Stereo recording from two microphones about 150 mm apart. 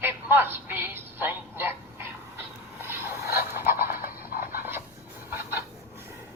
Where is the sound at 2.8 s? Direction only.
15° right (ahead or behind).